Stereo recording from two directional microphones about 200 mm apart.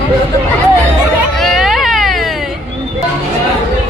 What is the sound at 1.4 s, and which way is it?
Baby cry, centre (ahead or behind).